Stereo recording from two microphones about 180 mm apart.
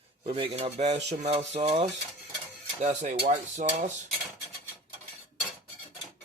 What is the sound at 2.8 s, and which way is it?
Dishes, 40° right (ahead or behind).